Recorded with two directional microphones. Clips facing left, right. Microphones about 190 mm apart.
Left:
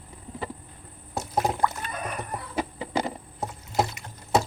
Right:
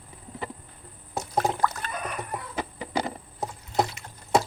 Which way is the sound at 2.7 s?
25° left (ahead or behind).